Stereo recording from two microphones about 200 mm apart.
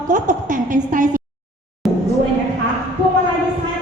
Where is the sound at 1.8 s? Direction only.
Centre (ahead or behind).